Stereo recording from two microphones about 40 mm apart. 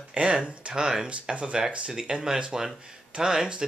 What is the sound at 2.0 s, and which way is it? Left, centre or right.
Speech, centre.